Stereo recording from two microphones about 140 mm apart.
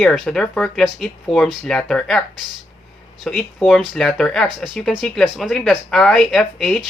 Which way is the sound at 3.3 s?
5° left (ahead or behind).